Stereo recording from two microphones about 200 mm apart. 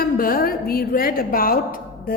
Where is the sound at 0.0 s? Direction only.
45° left (ahead or behind).